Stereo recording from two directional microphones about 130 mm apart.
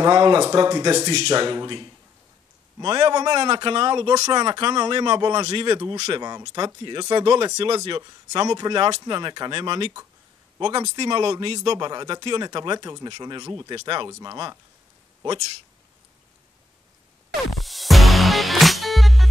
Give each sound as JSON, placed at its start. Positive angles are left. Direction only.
{"t": 0.0, "sound": "speech", "side_deg": -35}
{"t": 0.9, "sound": "speech", "side_deg": -55}
{"t": 1.3, "sound": "speech", "side_deg": -35}
{"t": 6.1, "sound": "speech", "side_deg": -30}
{"t": 7.5, "sound": "speech", "side_deg": -50}
{"t": 8.3, "sound": "speech", "side_deg": -30}
{"t": 17.6, "sound": "music", "side_deg": 0}